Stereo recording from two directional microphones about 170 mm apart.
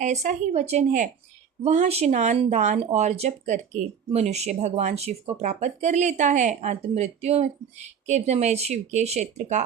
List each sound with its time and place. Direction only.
0.0 s speech: 45° right (ahead or behind)